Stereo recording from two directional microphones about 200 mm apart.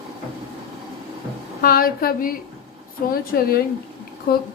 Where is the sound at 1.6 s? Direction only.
50° left (ahead or behind).